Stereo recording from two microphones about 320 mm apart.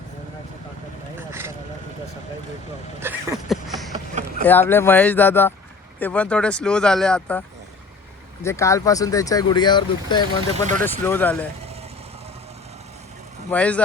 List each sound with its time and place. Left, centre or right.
1.3 s vehicle: centre
3.0 s a sound: centre
3.9 s vehicle: right
4.4 s speech: centre
8.4 s speech: centre
13.5 s speech: centre